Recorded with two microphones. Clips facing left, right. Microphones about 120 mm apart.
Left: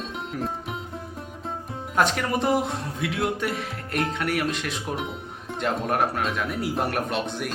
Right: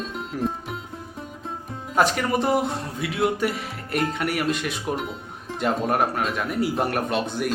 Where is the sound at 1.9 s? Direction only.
Centre (ahead or behind).